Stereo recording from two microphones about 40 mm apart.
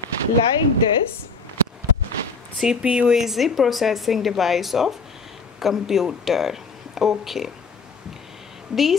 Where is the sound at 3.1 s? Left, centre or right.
Centre.